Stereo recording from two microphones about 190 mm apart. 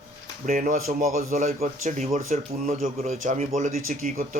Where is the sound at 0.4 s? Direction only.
45° right (ahead or behind).